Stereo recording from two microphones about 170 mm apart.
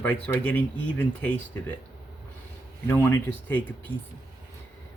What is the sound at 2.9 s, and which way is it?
Speech, 15° left (ahead or behind).